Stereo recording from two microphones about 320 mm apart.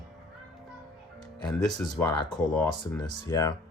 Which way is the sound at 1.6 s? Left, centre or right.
Centre.